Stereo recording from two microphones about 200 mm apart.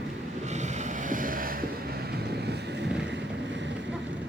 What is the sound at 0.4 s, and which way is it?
Boat, 35° right (ahead or behind).